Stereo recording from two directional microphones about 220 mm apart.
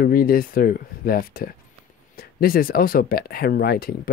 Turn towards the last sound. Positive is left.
turn(degrees=45)  # may be behind; listen again after turning